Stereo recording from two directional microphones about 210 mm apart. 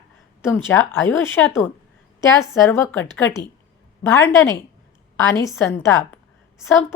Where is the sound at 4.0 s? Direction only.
10° left (ahead or behind).